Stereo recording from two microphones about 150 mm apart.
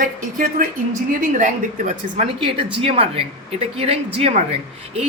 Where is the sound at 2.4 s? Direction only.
35° right (ahead or behind).